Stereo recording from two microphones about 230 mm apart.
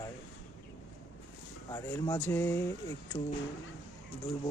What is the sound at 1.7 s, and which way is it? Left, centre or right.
Speech, centre.